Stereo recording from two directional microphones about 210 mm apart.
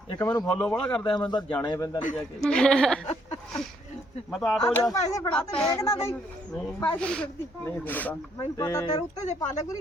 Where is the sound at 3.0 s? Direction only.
30° left (ahead or behind).